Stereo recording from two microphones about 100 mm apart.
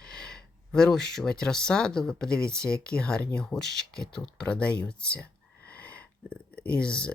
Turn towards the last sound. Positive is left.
turn(degrees=10)  # may be behind; listen again after turning